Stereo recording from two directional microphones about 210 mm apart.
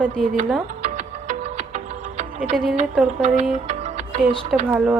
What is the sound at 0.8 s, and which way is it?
Music, 30° right (ahead or behind).